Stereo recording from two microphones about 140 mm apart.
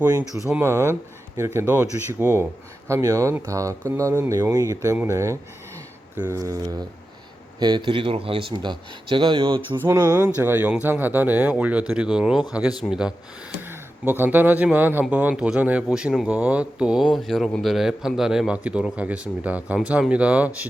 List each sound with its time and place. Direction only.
0.6 s speech: 15° right (ahead or behind); by 9.6 s 35° right (ahead or behind)
9.9 s speech: 15° right (ahead or behind)
13.6 s speech: 15° right (ahead or behind)